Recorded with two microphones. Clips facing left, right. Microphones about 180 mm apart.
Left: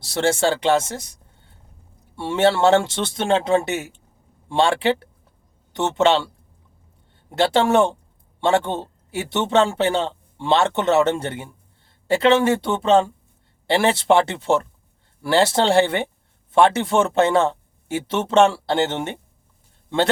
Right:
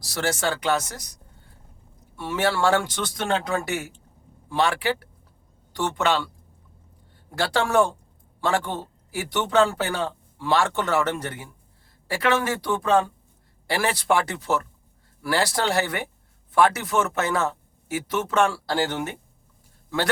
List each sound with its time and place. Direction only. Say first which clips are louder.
0.0 s speech: left 6 dB; 25° left (ahead or behind)